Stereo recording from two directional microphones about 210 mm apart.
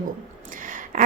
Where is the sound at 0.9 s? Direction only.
40° right (ahead or behind).